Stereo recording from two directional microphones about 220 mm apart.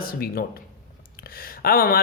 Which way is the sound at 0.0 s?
40° left (ahead or behind).